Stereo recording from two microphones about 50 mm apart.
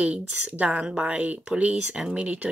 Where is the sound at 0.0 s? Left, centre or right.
Right.